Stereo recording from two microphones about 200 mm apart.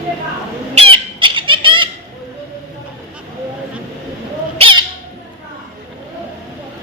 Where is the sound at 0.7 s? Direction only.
30° right (ahead or behind).